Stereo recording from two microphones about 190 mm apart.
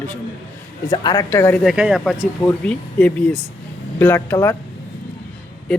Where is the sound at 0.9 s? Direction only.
20° left (ahead or behind).